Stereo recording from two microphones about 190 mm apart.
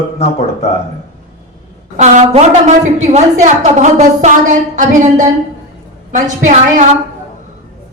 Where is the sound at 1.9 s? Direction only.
35° right (ahead or behind).